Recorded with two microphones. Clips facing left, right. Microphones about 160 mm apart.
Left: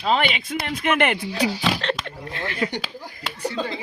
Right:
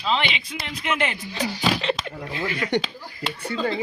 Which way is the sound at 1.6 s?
5° right (ahead or behind).